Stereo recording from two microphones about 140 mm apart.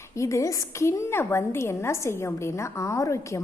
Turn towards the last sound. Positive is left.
turn(degrees=20)  # may be behind; listen again after turning